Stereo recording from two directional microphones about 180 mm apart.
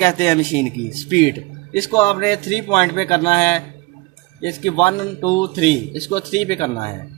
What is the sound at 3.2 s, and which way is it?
Speech, 30° left (ahead or behind).